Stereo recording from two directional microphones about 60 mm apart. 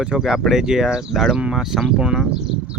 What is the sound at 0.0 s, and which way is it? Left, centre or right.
Speech, centre.